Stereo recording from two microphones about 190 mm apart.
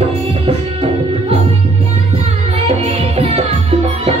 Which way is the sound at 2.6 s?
30° right (ahead or behind).